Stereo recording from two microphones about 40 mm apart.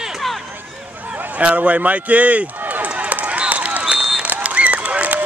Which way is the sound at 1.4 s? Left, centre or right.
Right.